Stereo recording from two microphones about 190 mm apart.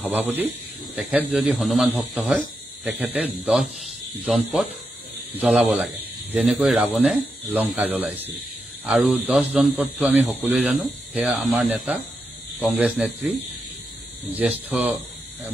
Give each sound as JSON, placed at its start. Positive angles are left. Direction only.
{"t": 0.0, "sound": "a man's voice", "side_deg": -10}
{"t": 4.3, "sound": "a man's voice", "side_deg": 0}
{"t": 14.7, "sound": "a man's voice", "side_deg": -5}